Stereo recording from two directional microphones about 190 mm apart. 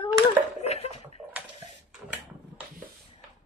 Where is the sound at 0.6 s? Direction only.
35° left (ahead or behind).